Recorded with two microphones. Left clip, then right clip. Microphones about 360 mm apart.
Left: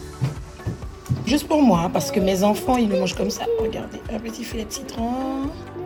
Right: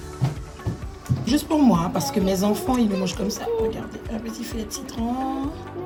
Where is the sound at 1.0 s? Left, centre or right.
Centre.